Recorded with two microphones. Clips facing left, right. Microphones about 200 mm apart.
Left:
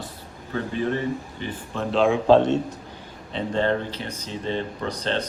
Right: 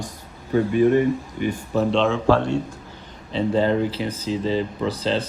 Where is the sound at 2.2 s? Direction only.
20° left (ahead or behind).